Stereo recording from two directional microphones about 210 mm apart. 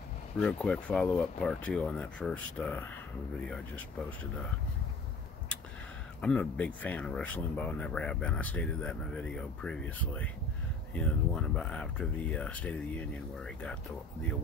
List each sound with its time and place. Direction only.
0.4 s speech: 5° left (ahead or behind)
6.2 s speech: 5° left (ahead or behind)